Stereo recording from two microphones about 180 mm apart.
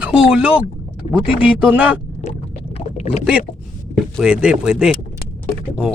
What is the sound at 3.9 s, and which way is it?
Speech, 5° right (ahead or behind).